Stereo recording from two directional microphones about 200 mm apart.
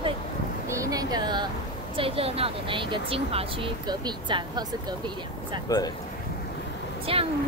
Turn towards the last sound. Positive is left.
turn(degrees=-30)  # may be behind; listen again after turning